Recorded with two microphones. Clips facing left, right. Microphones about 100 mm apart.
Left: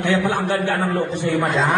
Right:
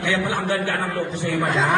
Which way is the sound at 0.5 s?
15° left (ahead or behind).